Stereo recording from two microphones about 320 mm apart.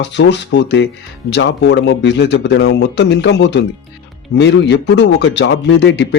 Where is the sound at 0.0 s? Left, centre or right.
Left.